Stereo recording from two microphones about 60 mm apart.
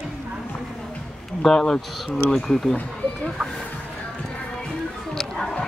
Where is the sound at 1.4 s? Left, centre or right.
Centre.